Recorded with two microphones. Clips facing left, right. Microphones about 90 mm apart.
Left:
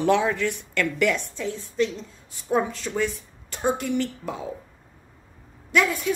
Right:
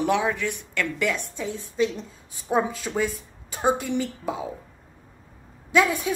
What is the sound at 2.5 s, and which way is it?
Speech, 15° right (ahead or behind).